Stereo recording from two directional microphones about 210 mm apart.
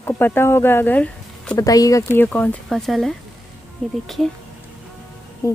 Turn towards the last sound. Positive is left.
turn(degrees=15)  # may be behind; listen again after turning